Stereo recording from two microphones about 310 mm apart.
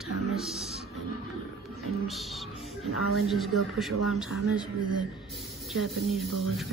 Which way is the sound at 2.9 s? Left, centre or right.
Left.